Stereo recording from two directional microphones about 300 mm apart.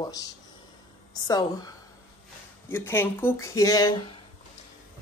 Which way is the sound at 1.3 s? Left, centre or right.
Centre.